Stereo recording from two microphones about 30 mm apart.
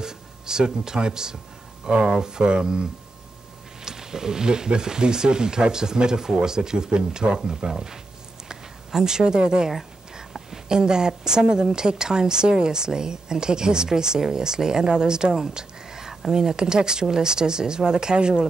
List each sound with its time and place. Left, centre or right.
0.0 s speech: right
3.8 s speech: centre
10.7 s speech: right
15.5 s a sound: centre
16.3 s speech: right